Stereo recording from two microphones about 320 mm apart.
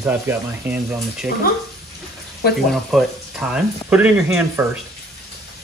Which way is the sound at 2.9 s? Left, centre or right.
Centre.